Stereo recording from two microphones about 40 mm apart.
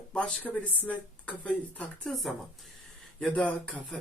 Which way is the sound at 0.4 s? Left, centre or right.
Left.